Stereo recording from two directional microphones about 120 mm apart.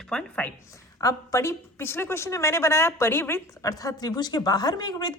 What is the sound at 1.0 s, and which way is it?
A woman's voice, 25° left (ahead or behind).